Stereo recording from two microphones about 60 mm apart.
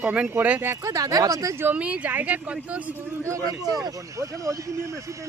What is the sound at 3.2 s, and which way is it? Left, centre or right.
Speech, right.